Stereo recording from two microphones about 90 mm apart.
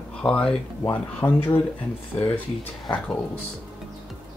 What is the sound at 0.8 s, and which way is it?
Speech, 20° left (ahead or behind).